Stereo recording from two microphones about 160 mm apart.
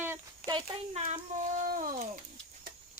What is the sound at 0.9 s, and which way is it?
Speech, 50° right (ahead or behind).